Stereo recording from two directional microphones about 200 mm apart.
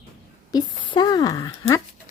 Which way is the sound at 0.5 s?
20° left (ahead or behind).